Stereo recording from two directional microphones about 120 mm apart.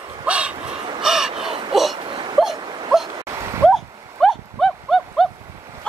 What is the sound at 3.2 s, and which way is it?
Dog, 25° right (ahead or behind).